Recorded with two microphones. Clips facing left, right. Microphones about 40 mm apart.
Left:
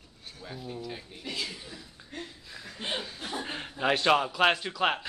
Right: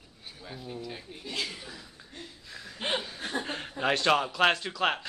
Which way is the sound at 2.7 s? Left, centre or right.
Right.